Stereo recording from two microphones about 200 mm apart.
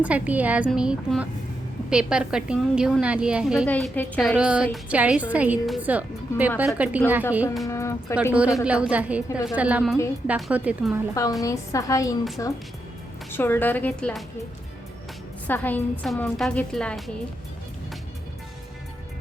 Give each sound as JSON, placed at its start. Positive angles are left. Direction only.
{"t": 0.0, "sound": "a woman's voice", "side_deg": -5}
{"t": 7.7, "sound": "music", "side_deg": 15}
{"t": 8.1, "sound": "a woman's voice", "side_deg": -5}
{"t": 11.1, "sound": "a woman's voice", "side_deg": 15}
{"t": 15.4, "sound": "a woman's voice", "side_deg": 10}